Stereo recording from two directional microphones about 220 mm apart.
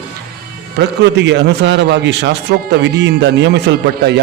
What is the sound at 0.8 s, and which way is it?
A man's voice, 55° right (ahead or behind).